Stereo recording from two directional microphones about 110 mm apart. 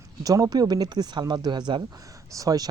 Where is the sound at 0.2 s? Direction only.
35° right (ahead or behind).